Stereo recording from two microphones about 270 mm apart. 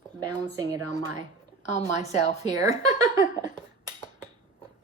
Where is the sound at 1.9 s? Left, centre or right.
Left.